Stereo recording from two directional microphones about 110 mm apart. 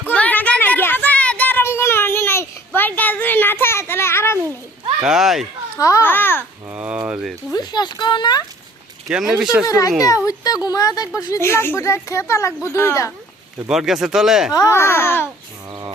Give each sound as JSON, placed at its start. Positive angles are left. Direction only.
{"t": 0.1, "sound": "a sound", "side_deg": 15}
{"t": 5.0, "sound": "speech", "side_deg": -5}
{"t": 5.8, "sound": "speech", "side_deg": 30}
{"t": 6.1, "sound": "babbling", "side_deg": 20}
{"t": 6.7, "sound": "a sound", "side_deg": -10}
{"t": 7.5, "sound": "speech", "side_deg": 40}
{"t": 9.0, "sound": "speech", "side_deg": -5}
{"t": 9.6, "sound": "speech", "side_deg": 30}
{"t": 13.7, "sound": "speech", "side_deg": -5}
{"t": 14.5, "sound": "speech", "side_deg": 25}